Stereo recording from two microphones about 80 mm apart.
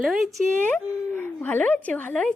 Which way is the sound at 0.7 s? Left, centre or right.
Left.